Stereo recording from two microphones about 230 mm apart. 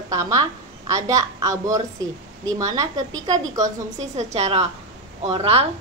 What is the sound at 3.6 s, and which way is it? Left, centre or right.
A woman's voice, right.